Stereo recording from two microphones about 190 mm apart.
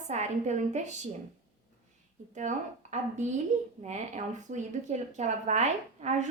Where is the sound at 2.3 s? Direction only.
40° right (ahead or behind).